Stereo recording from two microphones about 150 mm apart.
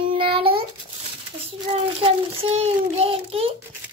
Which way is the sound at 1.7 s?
40° right (ahead or behind).